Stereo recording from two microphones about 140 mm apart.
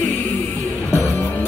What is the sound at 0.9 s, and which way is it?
Music, 15° left (ahead or behind).